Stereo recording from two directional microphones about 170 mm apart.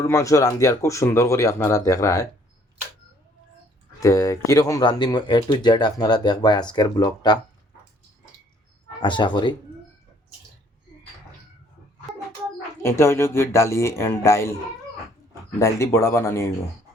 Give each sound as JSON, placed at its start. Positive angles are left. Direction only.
{"t": 0.0, "sound": "speech", "side_deg": 20}
{"t": 4.0, "sound": "speech", "side_deg": 20}
{"t": 9.0, "sound": "speech", "side_deg": 25}
{"t": 12.8, "sound": "speech", "side_deg": 15}
{"t": 15.5, "sound": "speech", "side_deg": 15}